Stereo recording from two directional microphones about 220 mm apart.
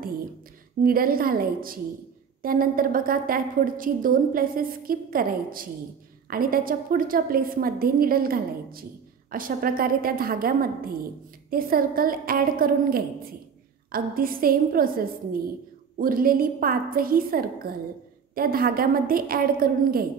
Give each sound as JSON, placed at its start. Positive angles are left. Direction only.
{"t": 0.8, "sound": "a woman's voice", "side_deg": -40}